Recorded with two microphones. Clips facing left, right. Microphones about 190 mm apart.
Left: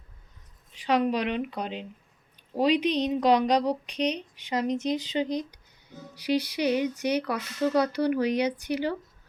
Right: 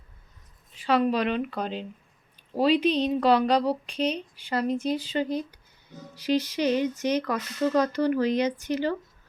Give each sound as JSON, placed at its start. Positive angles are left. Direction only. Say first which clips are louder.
{"t": 0.8, "sound": "speech", "louder": "right 1 dB", "side_deg": 15}